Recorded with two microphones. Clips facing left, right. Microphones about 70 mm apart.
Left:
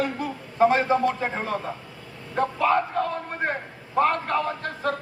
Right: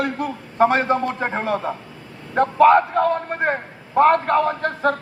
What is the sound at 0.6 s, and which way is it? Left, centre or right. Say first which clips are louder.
A man's voice: right 2 dB; right.